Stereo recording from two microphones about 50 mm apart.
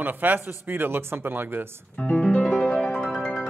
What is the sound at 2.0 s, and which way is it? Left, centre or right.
Music, left.